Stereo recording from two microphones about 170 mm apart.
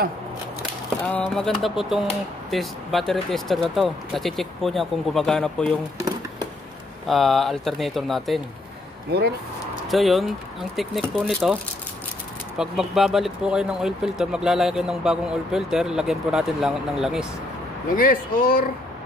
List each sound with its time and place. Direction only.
1.3 s speech: centre (ahead or behind)
7.1 s speech: centre (ahead or behind)
9.8 s speech: centre (ahead or behind)
12.5 s speech: centre (ahead or behind)
17.9 s speech: 55° left (ahead or behind)